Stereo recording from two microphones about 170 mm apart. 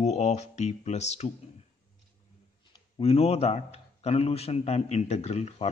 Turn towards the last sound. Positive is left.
turn(degrees=40)  # may be behind; listen again after turning